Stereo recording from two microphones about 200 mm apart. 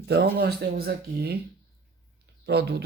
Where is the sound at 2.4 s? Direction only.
55° right (ahead or behind).